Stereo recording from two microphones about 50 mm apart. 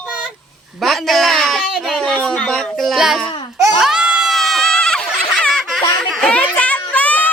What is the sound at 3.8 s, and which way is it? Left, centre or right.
Baby cry, centre.